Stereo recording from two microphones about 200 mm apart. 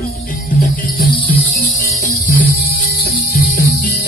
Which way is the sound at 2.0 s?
45° left (ahead or behind).